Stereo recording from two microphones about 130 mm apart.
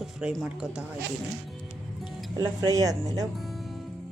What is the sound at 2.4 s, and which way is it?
Speech, 25° right (ahead or behind).